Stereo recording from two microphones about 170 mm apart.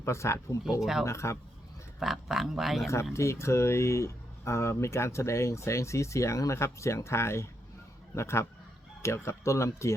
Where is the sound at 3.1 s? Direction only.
15° left (ahead or behind).